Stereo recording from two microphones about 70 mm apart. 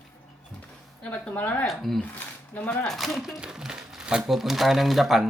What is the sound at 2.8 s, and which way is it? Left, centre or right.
Speech, centre.